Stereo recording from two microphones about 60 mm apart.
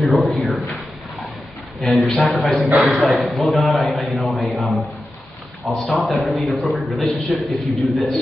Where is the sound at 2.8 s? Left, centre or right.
Right.